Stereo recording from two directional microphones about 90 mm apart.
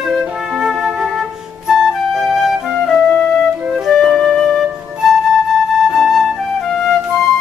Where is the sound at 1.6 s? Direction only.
5° right (ahead or behind).